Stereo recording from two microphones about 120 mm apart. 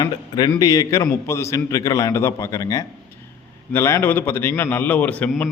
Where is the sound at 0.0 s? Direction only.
35° left (ahead or behind).